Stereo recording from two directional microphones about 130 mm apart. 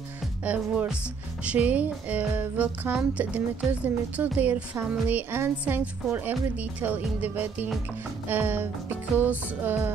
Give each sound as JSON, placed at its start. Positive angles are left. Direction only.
{"t": 0.4, "sound": "speech", "side_deg": -10}